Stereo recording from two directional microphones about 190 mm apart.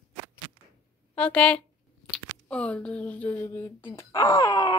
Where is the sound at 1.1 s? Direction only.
5° left (ahead or behind).